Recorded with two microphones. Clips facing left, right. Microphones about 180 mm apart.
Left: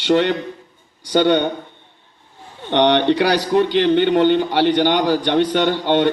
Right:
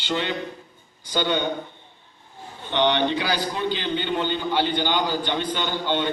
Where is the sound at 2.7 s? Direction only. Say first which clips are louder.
Left 7 dB; 70° left (ahead or behind).